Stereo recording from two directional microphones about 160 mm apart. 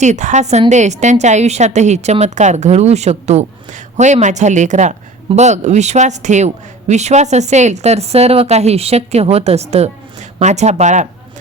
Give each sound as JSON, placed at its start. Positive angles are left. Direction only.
{"t": 0.0, "sound": "a man's voice", "side_deg": -50}